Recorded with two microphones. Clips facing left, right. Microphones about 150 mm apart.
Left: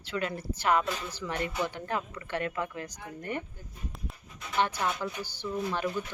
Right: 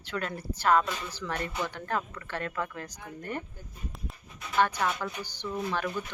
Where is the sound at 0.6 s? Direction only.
10° left (ahead or behind).